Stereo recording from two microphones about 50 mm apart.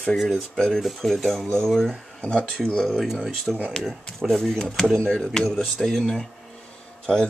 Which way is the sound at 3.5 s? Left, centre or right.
Centre.